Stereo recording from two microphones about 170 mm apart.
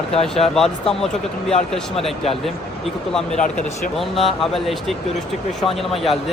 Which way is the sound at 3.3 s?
45° left (ahead or behind).